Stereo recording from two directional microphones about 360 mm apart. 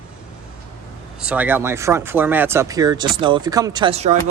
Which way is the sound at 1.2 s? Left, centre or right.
Centre.